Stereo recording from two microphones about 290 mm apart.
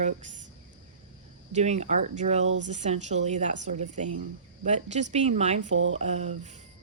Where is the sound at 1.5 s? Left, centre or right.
Right.